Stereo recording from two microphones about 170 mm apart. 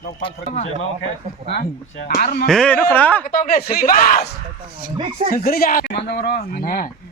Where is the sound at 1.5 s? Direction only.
70° left (ahead or behind).